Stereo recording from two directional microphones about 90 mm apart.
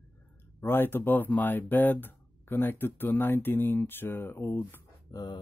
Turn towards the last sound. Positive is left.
turn(degrees=45)  # may be behind; listen again after turning